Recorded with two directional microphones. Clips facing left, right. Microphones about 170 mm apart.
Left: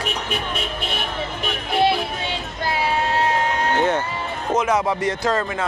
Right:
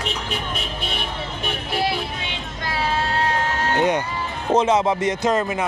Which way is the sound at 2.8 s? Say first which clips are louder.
Left 1 dB; 15° left (ahead or behind).